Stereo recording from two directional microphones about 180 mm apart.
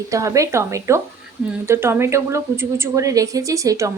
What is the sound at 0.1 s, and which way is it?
Speech, 15° right (ahead or behind).